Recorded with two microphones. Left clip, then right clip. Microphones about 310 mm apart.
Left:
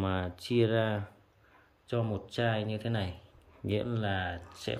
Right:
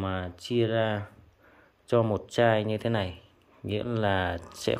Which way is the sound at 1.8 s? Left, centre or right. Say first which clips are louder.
Right 9 dB; centre.